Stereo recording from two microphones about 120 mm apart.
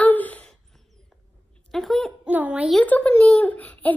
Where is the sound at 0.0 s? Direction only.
15° left (ahead or behind).